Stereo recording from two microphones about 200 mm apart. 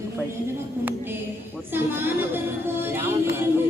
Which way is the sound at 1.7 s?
10° right (ahead or behind).